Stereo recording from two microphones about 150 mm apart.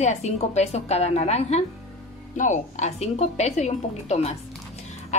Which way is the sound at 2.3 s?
55° left (ahead or behind).